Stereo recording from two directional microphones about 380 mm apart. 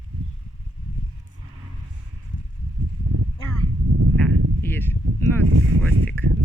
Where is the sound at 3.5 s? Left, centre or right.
Right.